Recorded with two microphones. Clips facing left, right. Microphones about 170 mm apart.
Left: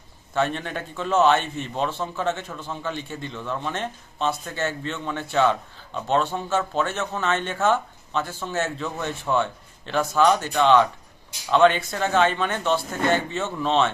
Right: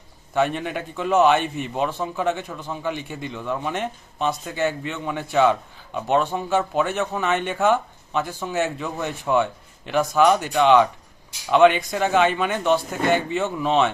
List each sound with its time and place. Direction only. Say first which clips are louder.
0.3 s speech: right 3 dB; 10° right (ahead or behind)